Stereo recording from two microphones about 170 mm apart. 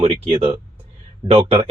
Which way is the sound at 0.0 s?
35° right (ahead or behind).